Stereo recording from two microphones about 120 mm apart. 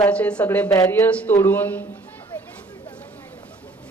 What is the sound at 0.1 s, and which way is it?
A man's voice, 10° left (ahead or behind).